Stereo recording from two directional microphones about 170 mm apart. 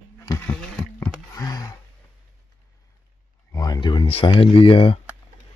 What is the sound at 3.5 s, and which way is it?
Speech, 25° left (ahead or behind).